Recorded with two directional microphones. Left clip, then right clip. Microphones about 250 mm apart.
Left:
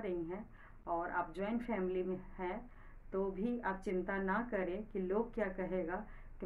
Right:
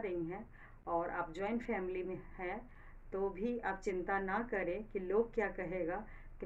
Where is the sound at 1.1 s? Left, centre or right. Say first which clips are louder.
Even; centre.